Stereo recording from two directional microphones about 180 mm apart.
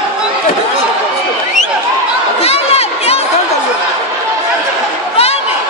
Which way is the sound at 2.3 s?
35° left (ahead or behind).